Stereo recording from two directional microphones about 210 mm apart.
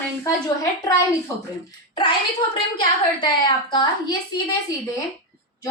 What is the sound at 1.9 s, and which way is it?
Speech, 20° left (ahead or behind).